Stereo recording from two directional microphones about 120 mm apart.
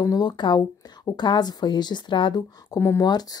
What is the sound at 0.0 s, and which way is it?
Speech, 35° left (ahead or behind).